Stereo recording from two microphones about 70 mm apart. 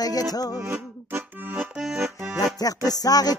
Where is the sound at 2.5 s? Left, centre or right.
Left.